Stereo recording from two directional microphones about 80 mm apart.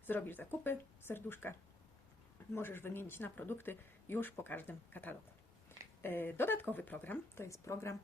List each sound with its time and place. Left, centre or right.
0.0 s speech: left
7.4 s speech: left